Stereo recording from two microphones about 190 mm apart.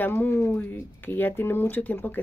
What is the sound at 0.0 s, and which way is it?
A woman's voice, 10° left (ahead or behind).